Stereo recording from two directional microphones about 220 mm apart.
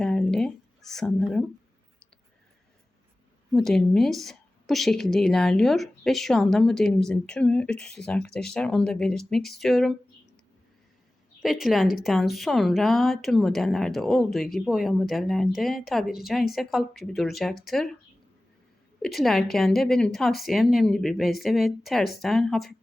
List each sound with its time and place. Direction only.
0.0 s a sound: 5° left (ahead or behind)
3.5 s a woman's voice: centre (ahead or behind)
11.4 s a woman's voice: centre (ahead or behind)
19.0 s a woman's voice: centre (ahead or behind)